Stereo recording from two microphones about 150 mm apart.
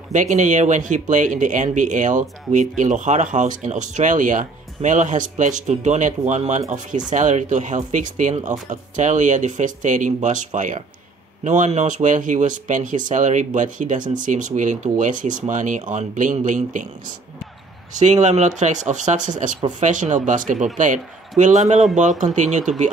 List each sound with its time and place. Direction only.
0.1 s speech: 55° right (ahead or behind)
17.9 s speech: 50° right (ahead or behind)